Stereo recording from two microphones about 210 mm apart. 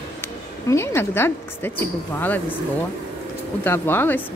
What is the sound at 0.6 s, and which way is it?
Speech, 10° left (ahead or behind).